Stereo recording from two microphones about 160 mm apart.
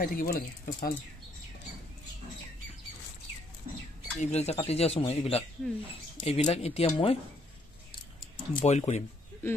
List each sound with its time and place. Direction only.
0.0 s speech: 65° left (ahead or behind)
4.2 s speech: 45° left (ahead or behind)
5.6 s speech: 5° left (ahead or behind)
6.2 s speech: 40° left (ahead or behind)
8.6 s speech: 45° left (ahead or behind)